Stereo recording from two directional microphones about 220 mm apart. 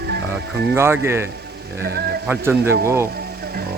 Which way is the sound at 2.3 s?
10° right (ahead or behind).